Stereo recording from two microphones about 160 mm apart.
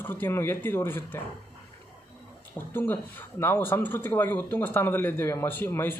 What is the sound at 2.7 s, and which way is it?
Speech, 10° left (ahead or behind).